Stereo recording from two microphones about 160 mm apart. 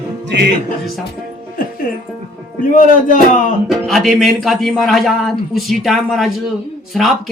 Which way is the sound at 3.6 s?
Centre (ahead or behind).